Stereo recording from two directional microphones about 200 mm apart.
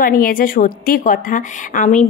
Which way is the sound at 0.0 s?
45° left (ahead or behind).